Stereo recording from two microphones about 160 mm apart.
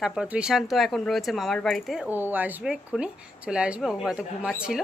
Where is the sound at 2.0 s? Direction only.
10° right (ahead or behind).